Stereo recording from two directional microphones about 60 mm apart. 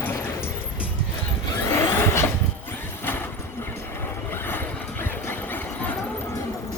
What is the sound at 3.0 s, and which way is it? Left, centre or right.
Vehicle, left.